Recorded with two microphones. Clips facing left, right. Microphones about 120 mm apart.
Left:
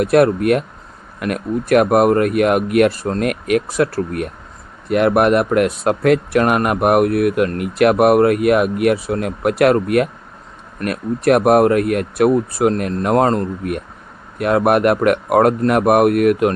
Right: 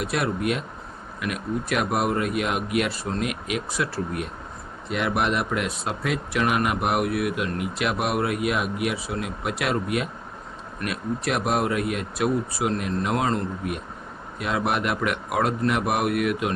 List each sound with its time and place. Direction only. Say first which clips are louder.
0.0 s speech: left 12 dB; 55° left (ahead or behind)